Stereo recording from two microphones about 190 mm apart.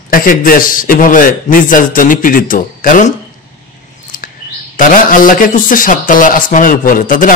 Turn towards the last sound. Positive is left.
turn(degrees=45)  # may be behind; listen again after turning